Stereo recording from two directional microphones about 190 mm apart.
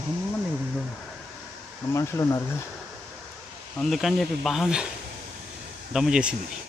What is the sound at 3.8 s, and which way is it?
Speech, centre (ahead or behind).